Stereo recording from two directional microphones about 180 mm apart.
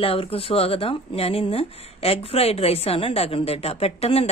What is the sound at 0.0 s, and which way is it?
Speech, 30° left (ahead or behind).